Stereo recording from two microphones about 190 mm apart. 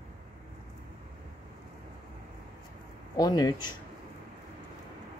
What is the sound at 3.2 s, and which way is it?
Speech, 20° left (ahead or behind).